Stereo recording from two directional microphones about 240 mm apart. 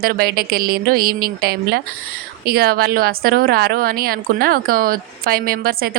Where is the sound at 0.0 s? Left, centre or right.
Right.